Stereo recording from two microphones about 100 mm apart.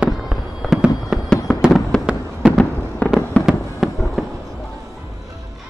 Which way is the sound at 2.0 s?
10° right (ahead or behind).